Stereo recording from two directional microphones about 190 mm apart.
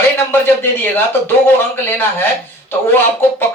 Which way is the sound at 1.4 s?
10° left (ahead or behind).